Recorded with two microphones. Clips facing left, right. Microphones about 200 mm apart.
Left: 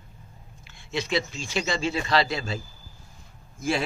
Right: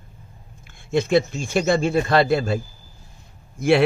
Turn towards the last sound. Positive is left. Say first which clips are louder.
# right 10 dB
turn(degrees=-65)  # may be behind; listen again after turning